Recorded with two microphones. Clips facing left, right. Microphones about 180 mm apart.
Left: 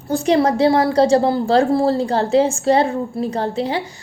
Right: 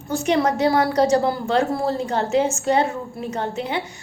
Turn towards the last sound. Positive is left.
turn(degrees=35)  # may be behind; listen again after turning